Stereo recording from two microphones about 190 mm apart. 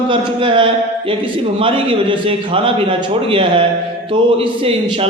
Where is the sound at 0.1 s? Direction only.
25° right (ahead or behind).